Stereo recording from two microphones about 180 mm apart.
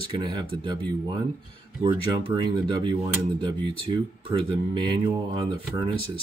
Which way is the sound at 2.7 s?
25° right (ahead or behind).